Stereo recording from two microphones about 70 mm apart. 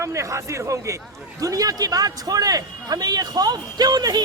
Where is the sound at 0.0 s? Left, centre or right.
Right.